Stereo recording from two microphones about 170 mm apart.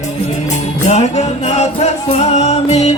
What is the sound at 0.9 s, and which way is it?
Music, 40° left (ahead or behind).